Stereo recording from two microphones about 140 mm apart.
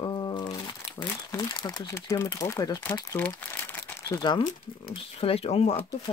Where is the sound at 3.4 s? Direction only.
15° left (ahead or behind).